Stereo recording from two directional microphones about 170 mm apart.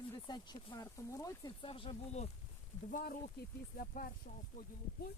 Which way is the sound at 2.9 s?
55° left (ahead or behind).